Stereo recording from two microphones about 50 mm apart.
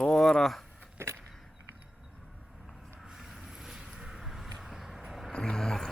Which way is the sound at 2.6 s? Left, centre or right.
Centre.